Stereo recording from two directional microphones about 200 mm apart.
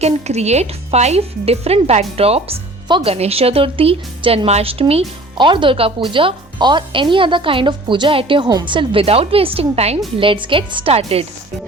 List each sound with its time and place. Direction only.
0.0 s speech: 35° right (ahead or behind)